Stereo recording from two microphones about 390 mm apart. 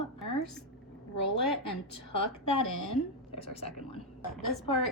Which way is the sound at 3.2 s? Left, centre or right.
Centre.